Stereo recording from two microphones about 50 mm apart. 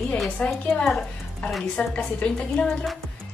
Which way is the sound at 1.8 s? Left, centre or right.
Centre.